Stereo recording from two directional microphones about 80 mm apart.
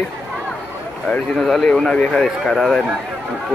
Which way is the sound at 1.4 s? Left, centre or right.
Centre.